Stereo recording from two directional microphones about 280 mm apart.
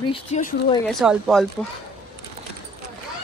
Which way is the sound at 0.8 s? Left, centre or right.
Centre.